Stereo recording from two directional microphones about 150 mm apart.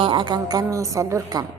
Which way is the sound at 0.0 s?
30° right (ahead or behind).